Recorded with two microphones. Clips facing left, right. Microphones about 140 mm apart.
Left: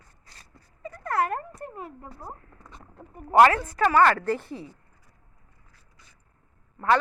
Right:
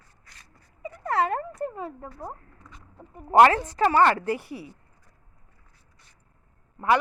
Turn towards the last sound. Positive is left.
turn(degrees=-20)  # may be behind; listen again after turning